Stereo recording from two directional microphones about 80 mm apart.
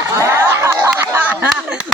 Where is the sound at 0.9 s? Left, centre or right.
Right.